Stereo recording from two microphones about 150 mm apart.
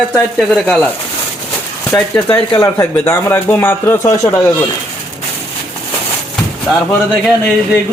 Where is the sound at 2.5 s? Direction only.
25° left (ahead or behind).